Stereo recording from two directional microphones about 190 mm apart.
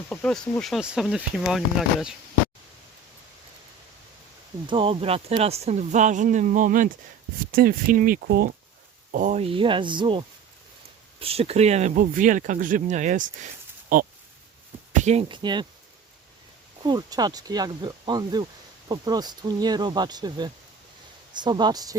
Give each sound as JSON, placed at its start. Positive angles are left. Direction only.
{"t": 0.1, "sound": "speech", "side_deg": 5}
{"t": 4.6, "sound": "speech", "side_deg": -25}
{"t": 9.1, "sound": "speech", "side_deg": -40}
{"t": 14.9, "sound": "speech", "side_deg": -35}
{"t": 16.8, "sound": "speech", "side_deg": -20}